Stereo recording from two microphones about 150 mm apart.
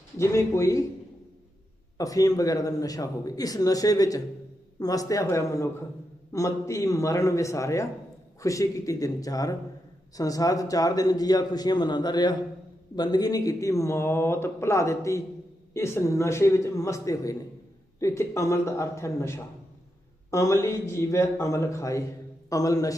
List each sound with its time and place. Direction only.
0.2 s speech: 20° left (ahead or behind)
2.0 s speech: 25° left (ahead or behind)